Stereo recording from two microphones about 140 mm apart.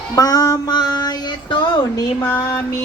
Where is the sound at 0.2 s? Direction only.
25° left (ahead or behind).